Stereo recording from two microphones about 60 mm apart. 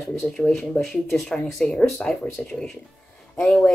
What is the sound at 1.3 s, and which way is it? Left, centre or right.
Speech, centre.